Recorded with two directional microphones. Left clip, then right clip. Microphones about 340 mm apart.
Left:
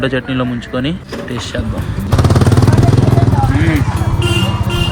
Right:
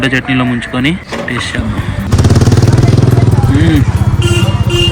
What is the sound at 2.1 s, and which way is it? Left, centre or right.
Vehicle, centre.